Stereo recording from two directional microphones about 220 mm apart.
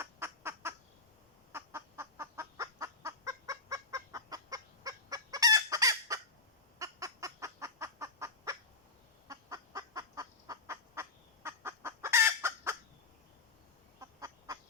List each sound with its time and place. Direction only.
0.0 s fowl: 10° right (ahead or behind)
14.0 s bird: 15° right (ahead or behind)